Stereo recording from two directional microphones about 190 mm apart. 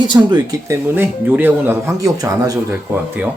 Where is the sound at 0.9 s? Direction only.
10° right (ahead or behind).